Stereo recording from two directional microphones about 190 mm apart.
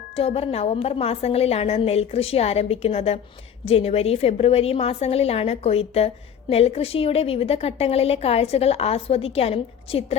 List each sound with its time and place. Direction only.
0.2 s a woman's voice: 30° left (ahead or behind)